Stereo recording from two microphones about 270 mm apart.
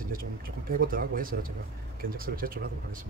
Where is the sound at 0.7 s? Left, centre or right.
Right.